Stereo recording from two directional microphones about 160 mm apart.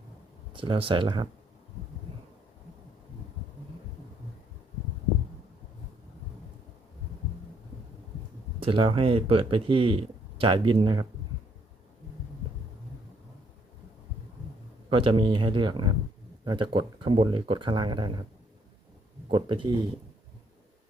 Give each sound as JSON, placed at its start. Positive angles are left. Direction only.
{"t": 0.5, "sound": "speech", "side_deg": -30}
{"t": 8.6, "sound": "speech", "side_deg": -35}
{"t": 14.8, "sound": "speech", "side_deg": -35}
{"t": 19.3, "sound": "speech", "side_deg": -30}